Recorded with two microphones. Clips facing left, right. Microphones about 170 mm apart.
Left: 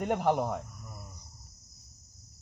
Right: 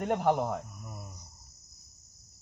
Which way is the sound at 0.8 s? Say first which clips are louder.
Right 3 dB; 15° right (ahead or behind).